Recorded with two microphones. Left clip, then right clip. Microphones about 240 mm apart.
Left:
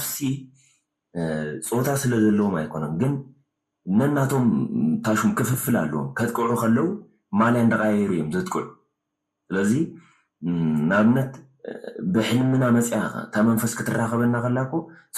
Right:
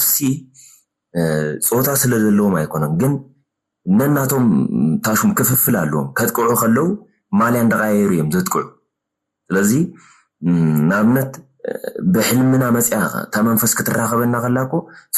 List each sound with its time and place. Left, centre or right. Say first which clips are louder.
1.1 s speech: right 9 dB; right